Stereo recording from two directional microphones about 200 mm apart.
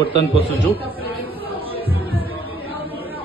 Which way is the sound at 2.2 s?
25° left (ahead or behind).